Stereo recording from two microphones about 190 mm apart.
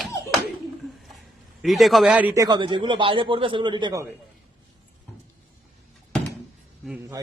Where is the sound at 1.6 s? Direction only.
Centre (ahead or behind).